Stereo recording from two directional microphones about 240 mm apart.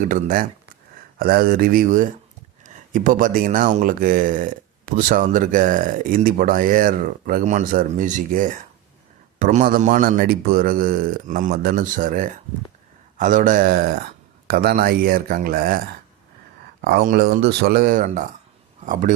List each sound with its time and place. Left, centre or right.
0.1 s speech: right
16.8 s speech: right